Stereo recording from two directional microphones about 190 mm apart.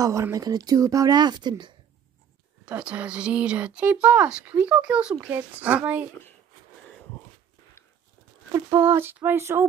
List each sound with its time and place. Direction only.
0.0 s speech: 15° right (ahead or behind)
2.6 s speech: 5° right (ahead or behind)
8.5 s speech: 15° right (ahead or behind)